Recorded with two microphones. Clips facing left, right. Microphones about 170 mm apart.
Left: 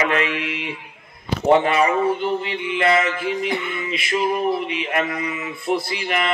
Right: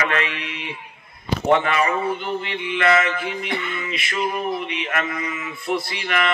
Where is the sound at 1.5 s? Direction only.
30° left (ahead or behind).